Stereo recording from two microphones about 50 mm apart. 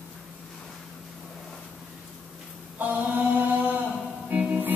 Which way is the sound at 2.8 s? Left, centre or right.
Right.